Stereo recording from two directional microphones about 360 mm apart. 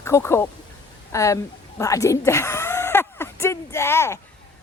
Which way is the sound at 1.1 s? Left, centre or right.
Centre.